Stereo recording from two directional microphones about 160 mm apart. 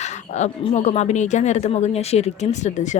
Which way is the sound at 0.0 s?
45° left (ahead or behind).